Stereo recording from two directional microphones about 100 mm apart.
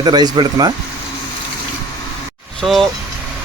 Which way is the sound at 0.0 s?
45° right (ahead or behind).